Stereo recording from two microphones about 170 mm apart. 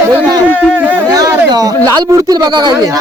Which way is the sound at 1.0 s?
20° right (ahead or behind).